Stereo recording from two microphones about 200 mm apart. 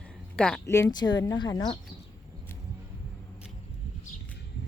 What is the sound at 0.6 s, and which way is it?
Speech, 15° left (ahead or behind).